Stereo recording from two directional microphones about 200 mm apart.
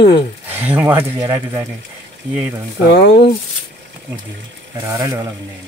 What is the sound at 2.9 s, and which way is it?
Speech, 60° left (ahead or behind).